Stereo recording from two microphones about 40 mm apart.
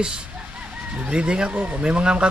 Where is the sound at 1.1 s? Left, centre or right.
Right.